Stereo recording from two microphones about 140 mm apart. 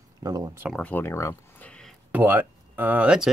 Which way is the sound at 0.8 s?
15° left (ahead or behind).